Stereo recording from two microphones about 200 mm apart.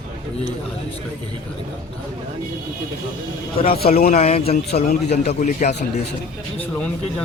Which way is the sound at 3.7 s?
50° left (ahead or behind).